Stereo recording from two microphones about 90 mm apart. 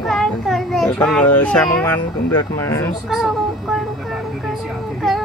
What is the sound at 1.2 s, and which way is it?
Speech, 20° left (ahead or behind).